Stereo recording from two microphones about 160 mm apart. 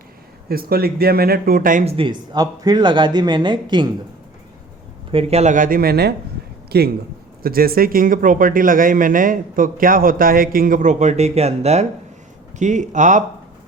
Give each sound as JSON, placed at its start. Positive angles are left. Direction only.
{"t": 0.4, "sound": "speech", "side_deg": -70}
{"t": 1.8, "sound": "speech", "side_deg": -35}
{"t": 5.1, "sound": "a man's voice", "side_deg": -45}
{"t": 7.4, "sound": "a man's voice", "side_deg": -70}